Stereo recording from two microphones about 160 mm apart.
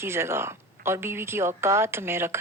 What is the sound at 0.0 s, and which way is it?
Speech, 15° right (ahead or behind).